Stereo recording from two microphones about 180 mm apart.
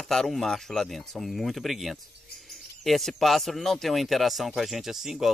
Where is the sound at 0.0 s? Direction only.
Centre (ahead or behind).